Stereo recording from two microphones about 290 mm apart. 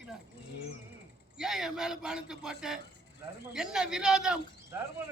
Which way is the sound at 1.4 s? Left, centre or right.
Centre.